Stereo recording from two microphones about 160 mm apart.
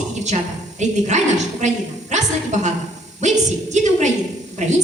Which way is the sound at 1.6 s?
50° right (ahead or behind).